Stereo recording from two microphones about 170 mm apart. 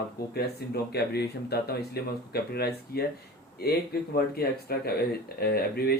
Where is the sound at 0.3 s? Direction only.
70° left (ahead or behind).